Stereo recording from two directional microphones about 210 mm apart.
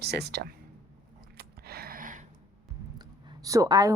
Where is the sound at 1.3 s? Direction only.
45° right (ahead or behind).